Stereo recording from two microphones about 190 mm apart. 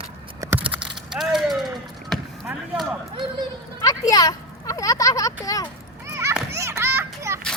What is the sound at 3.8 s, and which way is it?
A child's voice, 20° left (ahead or behind).